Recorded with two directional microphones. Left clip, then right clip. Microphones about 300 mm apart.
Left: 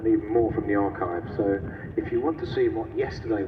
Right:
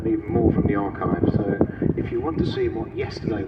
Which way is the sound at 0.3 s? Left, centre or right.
Right.